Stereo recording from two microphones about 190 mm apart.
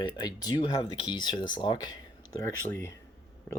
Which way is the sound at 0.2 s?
25° left (ahead or behind).